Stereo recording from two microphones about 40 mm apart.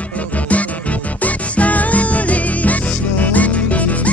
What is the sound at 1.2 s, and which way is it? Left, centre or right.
Music, left.